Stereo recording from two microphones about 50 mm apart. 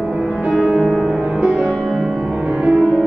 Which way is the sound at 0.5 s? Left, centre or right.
Centre.